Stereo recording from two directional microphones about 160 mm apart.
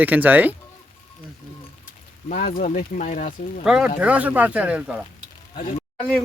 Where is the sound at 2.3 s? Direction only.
60° left (ahead or behind).